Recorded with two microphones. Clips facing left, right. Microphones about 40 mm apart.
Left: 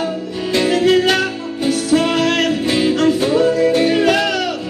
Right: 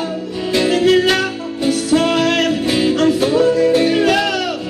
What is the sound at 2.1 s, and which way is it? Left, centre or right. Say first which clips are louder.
Music: right 1 dB; centre.